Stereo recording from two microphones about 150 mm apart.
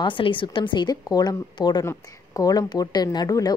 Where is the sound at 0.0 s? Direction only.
35° left (ahead or behind).